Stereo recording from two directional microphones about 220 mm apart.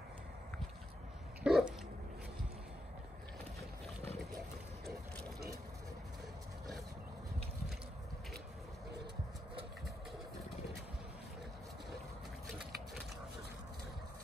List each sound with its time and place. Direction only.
1.4 s dog: 5° right (ahead or behind)